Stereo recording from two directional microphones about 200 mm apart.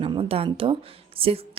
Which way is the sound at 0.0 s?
25° right (ahead or behind).